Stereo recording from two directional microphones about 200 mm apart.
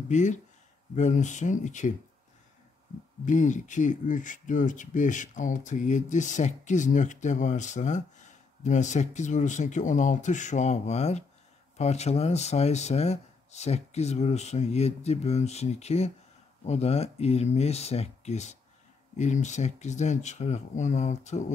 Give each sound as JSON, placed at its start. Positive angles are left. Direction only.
{"t": 0.1, "sound": "speech", "side_deg": 35}
{"t": 3.3, "sound": "speech", "side_deg": 40}